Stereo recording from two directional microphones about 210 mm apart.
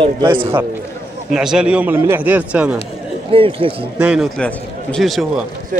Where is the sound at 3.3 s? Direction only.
25° right (ahead or behind).